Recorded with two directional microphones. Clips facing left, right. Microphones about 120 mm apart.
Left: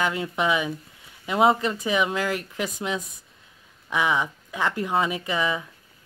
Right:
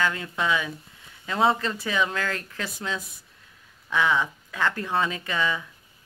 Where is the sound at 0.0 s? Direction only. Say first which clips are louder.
Left 2 dB; 20° left (ahead or behind).